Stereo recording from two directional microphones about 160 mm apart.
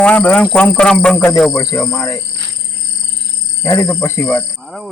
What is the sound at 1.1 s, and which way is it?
Speech, 15° left (ahead or behind).